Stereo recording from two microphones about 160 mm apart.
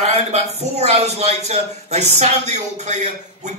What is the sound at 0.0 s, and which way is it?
A man's voice, 40° right (ahead or behind).